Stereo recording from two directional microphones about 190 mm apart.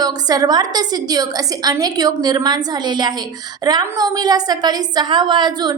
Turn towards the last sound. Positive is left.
turn(degrees=-20)  # may be behind; listen again after turning